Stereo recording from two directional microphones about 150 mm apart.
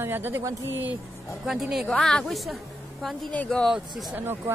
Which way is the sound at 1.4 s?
5° right (ahead or behind).